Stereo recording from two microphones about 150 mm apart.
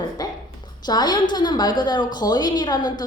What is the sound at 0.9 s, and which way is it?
A woman's voice, 30° left (ahead or behind).